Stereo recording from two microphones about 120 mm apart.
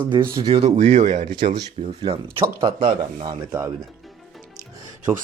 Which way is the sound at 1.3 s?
40° right (ahead or behind).